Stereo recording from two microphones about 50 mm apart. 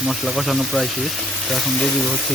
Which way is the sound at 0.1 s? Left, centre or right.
Centre.